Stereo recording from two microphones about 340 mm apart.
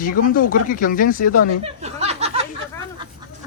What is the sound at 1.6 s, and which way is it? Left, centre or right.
Speech, centre.